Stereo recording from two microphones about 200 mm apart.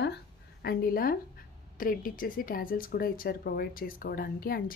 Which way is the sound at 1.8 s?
45° left (ahead or behind).